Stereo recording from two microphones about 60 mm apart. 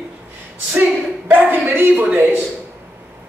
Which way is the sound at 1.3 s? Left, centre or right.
Right.